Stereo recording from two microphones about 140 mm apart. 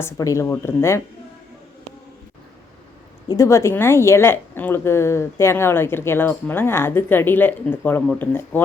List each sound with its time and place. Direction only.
0.0 s speech: 20° left (ahead or behind)
3.2 s a woman's voice: 20° left (ahead or behind)